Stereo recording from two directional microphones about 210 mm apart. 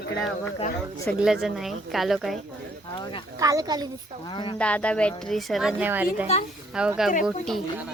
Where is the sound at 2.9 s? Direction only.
20° left (ahead or behind).